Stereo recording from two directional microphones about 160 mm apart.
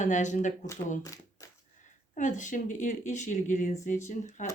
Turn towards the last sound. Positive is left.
turn(degrees=50)  # may be behind; listen again after turning